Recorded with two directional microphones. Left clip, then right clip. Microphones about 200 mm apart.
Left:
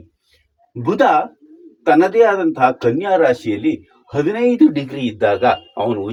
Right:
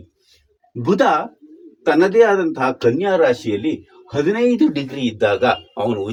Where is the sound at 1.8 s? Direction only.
20° right (ahead or behind).